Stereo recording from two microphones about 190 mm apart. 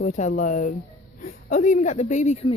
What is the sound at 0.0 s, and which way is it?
Speech, 40° left (ahead or behind).